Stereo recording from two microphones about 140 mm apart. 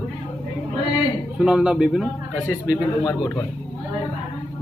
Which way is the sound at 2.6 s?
25° left (ahead or behind).